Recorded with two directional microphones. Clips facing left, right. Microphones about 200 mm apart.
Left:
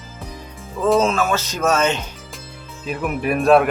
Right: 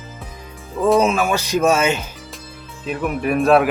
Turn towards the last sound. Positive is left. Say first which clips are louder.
# even
turn(degrees=0)  # may be behind; listen again after turning